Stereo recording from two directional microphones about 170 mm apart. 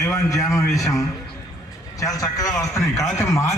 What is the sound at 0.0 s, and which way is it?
A man's voice, 20° left (ahead or behind).